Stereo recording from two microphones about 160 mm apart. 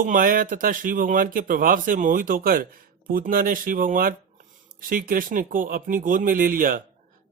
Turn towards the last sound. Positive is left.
turn(degrees=-60)  # may be behind; listen again after turning